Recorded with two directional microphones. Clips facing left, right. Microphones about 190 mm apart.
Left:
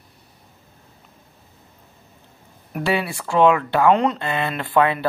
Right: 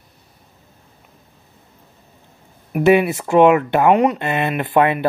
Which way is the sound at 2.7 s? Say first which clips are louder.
Right 9 dB; 20° right (ahead or behind).